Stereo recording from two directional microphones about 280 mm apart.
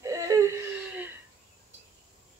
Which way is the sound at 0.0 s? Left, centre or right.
Centre.